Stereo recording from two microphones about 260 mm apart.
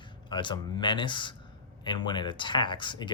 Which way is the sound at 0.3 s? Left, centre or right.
Centre.